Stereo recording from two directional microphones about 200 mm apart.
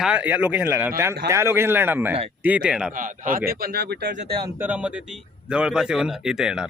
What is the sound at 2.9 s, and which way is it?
Speech, 40° right (ahead or behind).